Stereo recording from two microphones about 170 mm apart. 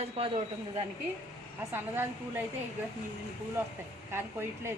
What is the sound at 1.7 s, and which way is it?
Speech, 10° right (ahead or behind).